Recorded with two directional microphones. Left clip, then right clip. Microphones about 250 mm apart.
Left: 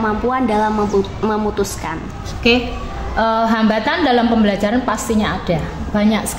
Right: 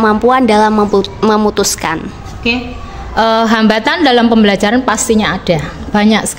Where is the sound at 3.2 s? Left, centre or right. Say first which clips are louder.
Right 5 dB; right.